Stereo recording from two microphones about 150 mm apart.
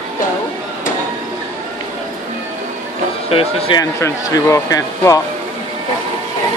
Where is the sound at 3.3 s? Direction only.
40° left (ahead or behind).